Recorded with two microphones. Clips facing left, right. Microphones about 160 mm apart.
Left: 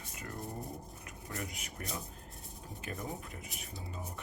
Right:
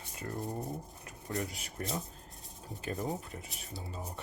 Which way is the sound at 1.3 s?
35° right (ahead or behind).